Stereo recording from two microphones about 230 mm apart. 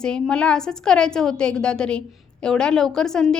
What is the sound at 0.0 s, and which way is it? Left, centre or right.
A woman's voice, centre.